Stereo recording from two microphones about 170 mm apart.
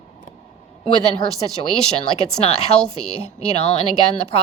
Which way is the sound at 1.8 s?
40° left (ahead or behind).